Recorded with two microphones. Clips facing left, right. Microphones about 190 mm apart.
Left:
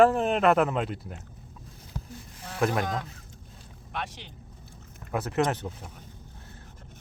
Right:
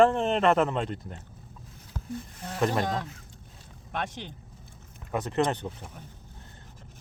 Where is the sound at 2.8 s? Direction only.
30° right (ahead or behind).